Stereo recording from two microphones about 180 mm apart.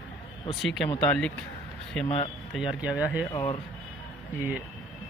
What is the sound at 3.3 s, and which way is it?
Speech, 25° left (ahead or behind).